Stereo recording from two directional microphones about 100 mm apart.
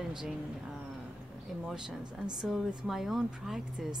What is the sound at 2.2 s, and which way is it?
Speech, 45° right (ahead or behind).